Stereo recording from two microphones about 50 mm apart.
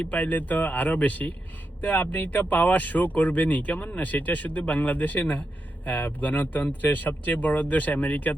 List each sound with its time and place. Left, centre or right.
0.0 s speech: left